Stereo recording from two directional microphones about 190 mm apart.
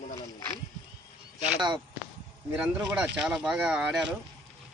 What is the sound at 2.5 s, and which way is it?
Speech, 5° right (ahead or behind).